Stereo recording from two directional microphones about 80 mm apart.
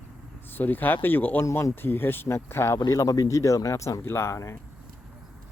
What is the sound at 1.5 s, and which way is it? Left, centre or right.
Speech, left.